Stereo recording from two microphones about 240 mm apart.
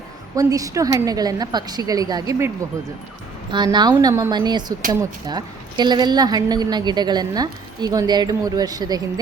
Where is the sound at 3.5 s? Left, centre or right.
Centre.